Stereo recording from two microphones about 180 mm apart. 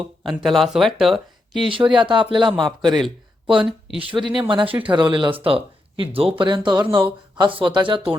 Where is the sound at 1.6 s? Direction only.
25° right (ahead or behind).